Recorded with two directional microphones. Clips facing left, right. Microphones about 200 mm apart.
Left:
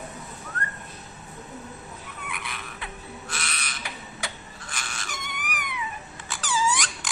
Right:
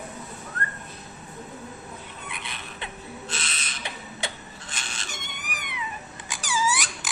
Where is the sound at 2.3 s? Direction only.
25° right (ahead or behind).